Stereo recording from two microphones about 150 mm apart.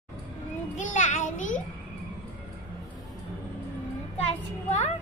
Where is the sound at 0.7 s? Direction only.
55° left (ahead or behind).